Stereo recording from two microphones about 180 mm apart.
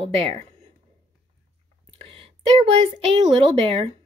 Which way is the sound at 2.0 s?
30° right (ahead or behind).